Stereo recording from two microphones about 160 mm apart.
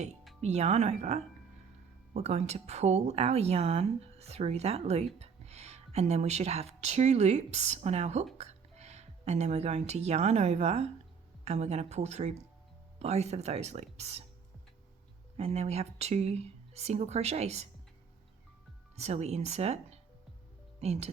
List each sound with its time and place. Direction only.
0.4 s a woman's voice: 45° right (ahead or behind)
15.4 s speech: 40° right (ahead or behind)
18.9 s speech: 40° right (ahead or behind)